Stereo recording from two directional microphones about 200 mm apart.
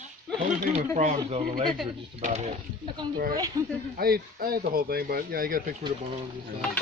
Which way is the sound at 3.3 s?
15° right (ahead or behind).